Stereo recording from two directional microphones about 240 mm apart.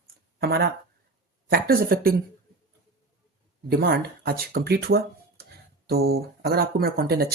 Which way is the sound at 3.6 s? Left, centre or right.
Right.